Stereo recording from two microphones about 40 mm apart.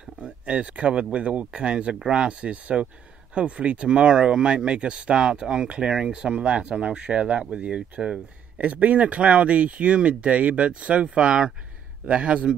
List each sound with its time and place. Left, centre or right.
0.0 s speech: right